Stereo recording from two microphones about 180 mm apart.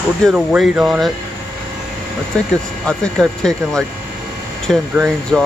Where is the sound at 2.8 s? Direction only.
5° left (ahead or behind).